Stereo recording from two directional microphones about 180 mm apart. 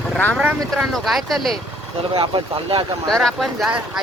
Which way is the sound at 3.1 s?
Centre (ahead or behind).